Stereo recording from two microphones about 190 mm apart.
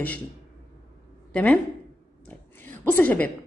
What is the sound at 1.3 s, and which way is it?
Speech, 5° left (ahead or behind).